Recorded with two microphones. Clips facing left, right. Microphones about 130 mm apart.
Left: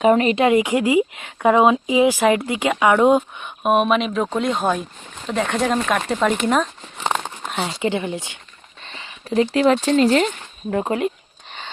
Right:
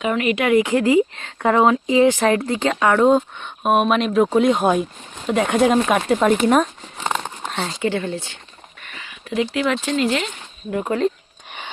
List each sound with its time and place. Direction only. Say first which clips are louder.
0.0 s speech: left 5 dB; 35° left (ahead or behind); by 7.0 s 5° right (ahead or behind)
7.0 s a sound: left 1 dB; centre (ahead or behind)
7.6 s speech: even; 15° left (ahead or behind)
8.8 s speech: left 2 dB; 30° left (ahead or behind); by 10.8 s 45° left (ahead or behind)